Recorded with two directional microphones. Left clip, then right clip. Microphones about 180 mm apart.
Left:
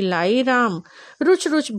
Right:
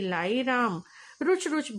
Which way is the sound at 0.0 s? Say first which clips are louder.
Left 9 dB; 40° left (ahead or behind).